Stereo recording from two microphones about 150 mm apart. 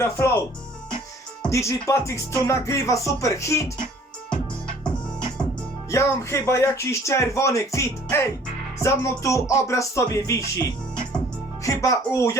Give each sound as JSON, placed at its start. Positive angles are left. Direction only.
{"t": 0.0, "sound": "speech", "side_deg": 15}
{"t": 1.5, "sound": "speech", "side_deg": 20}
{"t": 5.9, "sound": "speech", "side_deg": 20}